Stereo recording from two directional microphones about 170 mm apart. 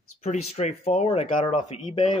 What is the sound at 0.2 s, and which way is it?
Speech, 40° left (ahead or behind).